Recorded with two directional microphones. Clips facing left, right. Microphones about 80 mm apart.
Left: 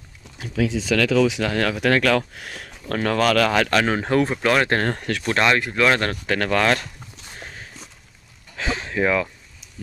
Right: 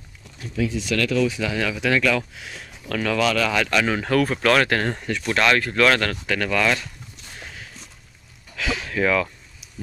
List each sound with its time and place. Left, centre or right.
0.4 s speech: left
1.4 s speech: left
4.0 s speech: left
4.8 s speech: left
5.2 s speech: left
5.5 s speech: centre
5.9 s speech: left
8.5 s a sound: left